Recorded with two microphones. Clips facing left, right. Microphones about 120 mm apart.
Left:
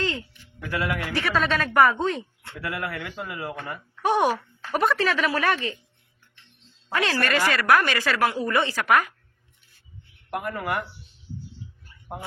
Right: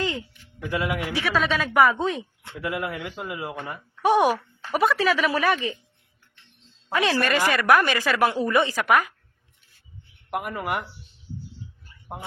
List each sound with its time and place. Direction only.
0.7 s speech: 20° right (ahead or behind)
1.1 s a woman's voice: centre (ahead or behind)
2.4 s speech: 15° right (ahead or behind)
6.9 s speech: 15° right (ahead or behind)
10.2 s speech: 15° right (ahead or behind)